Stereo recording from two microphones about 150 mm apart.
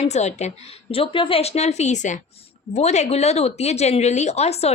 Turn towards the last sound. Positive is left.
turn(degrees=45)  # may be behind; listen again after turning